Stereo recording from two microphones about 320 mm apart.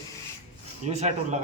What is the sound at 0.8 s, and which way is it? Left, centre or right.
Speech, right.